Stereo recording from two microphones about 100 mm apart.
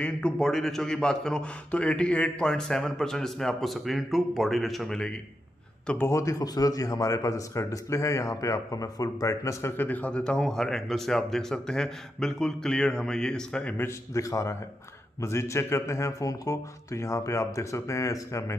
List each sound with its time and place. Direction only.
0.0 s a man's voice: 5° left (ahead or behind)
5.9 s a man's voice: 30° left (ahead or behind); by 13.7 s 10° left (ahead or behind)
13.7 s a man's voice: 30° left (ahead or behind)